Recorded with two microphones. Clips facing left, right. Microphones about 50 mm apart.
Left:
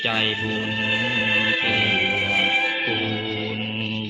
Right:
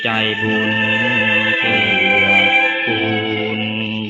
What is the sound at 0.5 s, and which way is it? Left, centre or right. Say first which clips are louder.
Music: right 9 dB; right.